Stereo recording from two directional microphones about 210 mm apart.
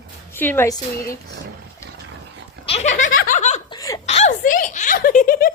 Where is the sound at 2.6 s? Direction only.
30° left (ahead or behind).